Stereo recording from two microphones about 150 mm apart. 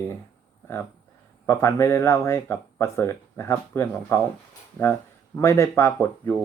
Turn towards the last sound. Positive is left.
turn(degrees=15)  # may be behind; listen again after turning